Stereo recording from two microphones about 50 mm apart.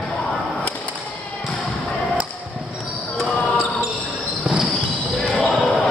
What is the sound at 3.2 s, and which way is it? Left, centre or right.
Basketball bounce, centre.